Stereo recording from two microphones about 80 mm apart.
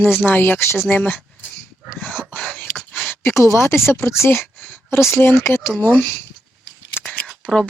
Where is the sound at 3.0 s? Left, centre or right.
Left.